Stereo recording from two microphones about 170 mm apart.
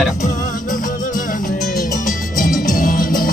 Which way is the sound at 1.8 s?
50° left (ahead or behind).